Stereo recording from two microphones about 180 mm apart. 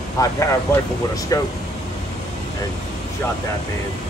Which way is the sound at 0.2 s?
20° left (ahead or behind).